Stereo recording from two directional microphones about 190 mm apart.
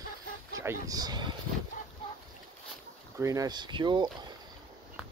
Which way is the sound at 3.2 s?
15° right (ahead or behind).